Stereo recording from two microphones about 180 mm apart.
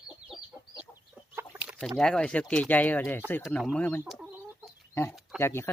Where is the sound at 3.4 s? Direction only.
Centre (ahead or behind).